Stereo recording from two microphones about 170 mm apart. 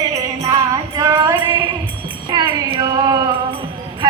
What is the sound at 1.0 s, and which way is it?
Music, 20° right (ahead or behind).